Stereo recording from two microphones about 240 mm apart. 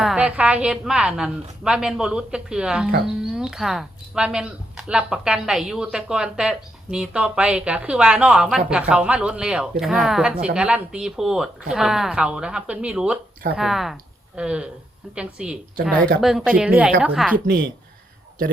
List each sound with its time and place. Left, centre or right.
0.0 s speech: centre
17.3 s speech: right